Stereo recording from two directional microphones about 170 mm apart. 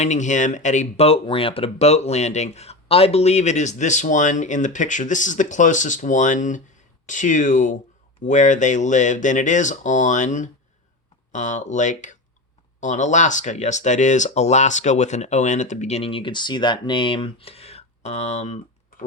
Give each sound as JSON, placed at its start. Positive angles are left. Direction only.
{"t": 0.0, "sound": "speech", "side_deg": 45}